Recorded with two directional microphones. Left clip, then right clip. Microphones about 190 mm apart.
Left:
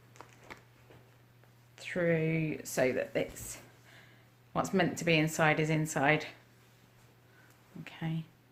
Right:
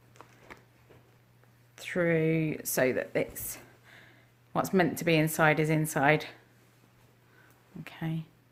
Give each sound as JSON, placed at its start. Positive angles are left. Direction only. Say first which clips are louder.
{"t": 0.1, "sound": "a sound", "louder": "even", "side_deg": -5}
{"t": 1.7, "sound": "speech", "louder": "right 3 dB", "side_deg": -35}
{"t": 7.9, "sound": "speech", "louder": "right 3 dB", "side_deg": -30}